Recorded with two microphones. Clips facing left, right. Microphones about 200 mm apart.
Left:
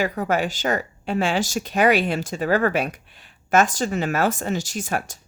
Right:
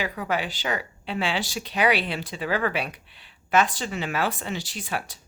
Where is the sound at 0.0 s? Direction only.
45° left (ahead or behind).